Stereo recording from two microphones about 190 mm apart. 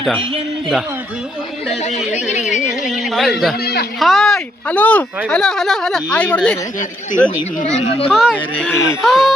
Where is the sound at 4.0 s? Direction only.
Centre (ahead or behind).